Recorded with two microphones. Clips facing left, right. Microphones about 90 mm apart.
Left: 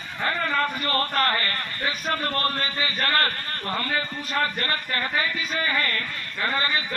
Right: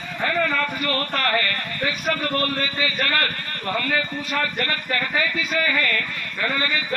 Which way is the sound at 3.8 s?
35° left (ahead or behind).